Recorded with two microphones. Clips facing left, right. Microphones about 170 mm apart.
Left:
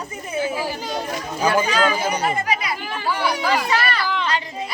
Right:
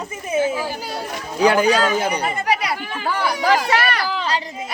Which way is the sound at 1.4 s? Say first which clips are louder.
Right 4 dB; 75° right (ahead or behind).